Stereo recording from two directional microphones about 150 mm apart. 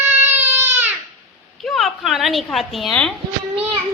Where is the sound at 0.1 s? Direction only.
15° right (ahead or behind).